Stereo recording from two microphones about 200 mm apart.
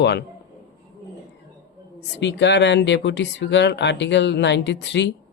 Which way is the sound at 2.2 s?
60° left (ahead or behind).